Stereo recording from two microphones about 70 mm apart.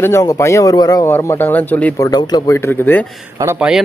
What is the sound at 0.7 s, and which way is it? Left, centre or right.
Speech, left.